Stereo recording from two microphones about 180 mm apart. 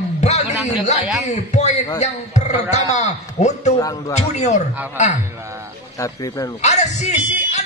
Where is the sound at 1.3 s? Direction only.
40° left (ahead or behind).